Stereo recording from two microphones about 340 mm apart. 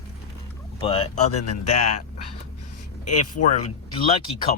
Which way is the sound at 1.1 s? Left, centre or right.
Left.